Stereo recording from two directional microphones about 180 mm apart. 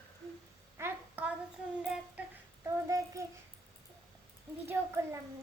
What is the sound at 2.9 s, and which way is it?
Speech, 15° right (ahead or behind).